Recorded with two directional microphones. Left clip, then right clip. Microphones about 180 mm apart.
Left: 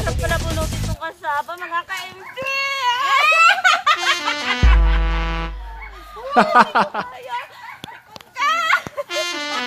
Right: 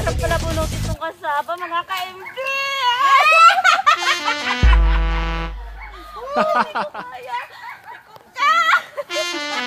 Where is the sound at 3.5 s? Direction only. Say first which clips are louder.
Right 2 dB; 45° right (ahead or behind).